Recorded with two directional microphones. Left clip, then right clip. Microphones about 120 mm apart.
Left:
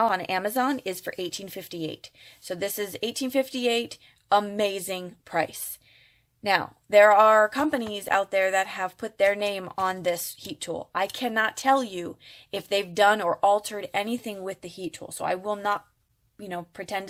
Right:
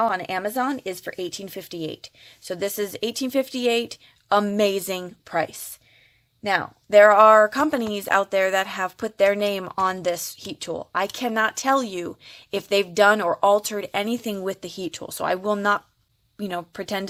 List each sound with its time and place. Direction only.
0.0 s speech: 10° right (ahead or behind); by 5.1 s 30° right (ahead or behind)
5.3 s speech: 15° right (ahead or behind)
13.5 s speech: 40° right (ahead or behind)
14.3 s speech: 40° right (ahead or behind)
16.4 s speech: 55° right (ahead or behind)